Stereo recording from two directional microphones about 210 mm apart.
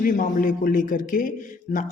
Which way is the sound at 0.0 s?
40° left (ahead or behind).